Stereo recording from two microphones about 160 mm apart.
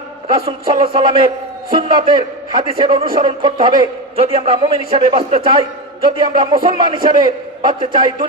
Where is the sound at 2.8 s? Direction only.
30° right (ahead or behind).